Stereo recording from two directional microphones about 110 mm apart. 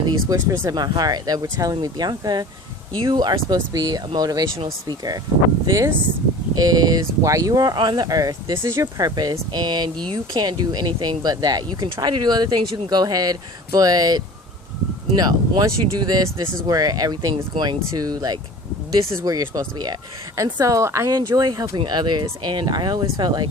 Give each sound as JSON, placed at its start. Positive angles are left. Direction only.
{"t": 0.1, "sound": "speech", "side_deg": -30}
{"t": 0.8, "sound": "speech", "side_deg": -40}
{"t": 21.1, "sound": "speech", "side_deg": -35}